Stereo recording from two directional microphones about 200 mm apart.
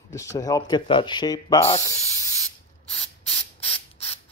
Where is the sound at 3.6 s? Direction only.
30° left (ahead or behind).